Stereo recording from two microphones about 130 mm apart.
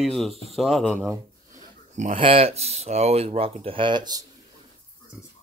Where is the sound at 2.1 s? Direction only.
45° right (ahead or behind).